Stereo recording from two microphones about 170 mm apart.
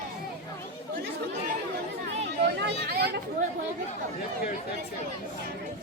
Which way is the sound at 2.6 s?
65° right (ahead or behind).